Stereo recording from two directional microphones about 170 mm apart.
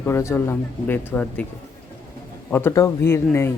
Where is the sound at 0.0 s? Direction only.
15° left (ahead or behind).